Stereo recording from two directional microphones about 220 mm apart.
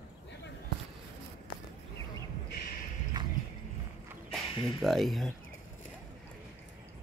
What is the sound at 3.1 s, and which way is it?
Music, 20° right (ahead or behind).